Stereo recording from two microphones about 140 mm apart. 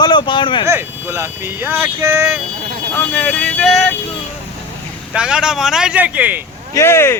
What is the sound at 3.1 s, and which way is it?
Vehicle, 5° left (ahead or behind).